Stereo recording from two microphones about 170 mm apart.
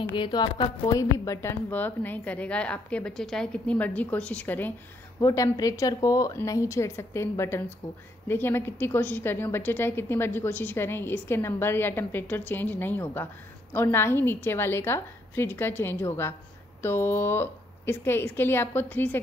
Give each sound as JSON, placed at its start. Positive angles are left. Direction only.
{"t": 0.1, "sound": "a woman's voice", "side_deg": 25}